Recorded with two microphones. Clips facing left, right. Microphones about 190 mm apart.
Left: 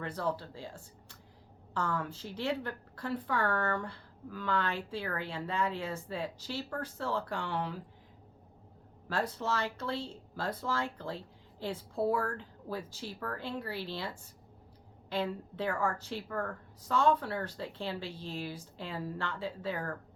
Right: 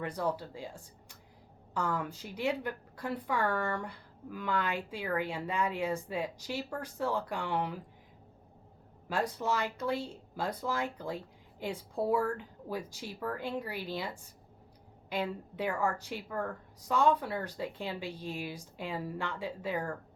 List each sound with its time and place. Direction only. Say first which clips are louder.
0.0 s a woman's voice: right 1 dB; 10° right (ahead or behind)
1.7 s a woman's voice: right 1 dB; 10° right (ahead or behind)
9.0 s a woman's voice: right 1 dB; 10° right (ahead or behind)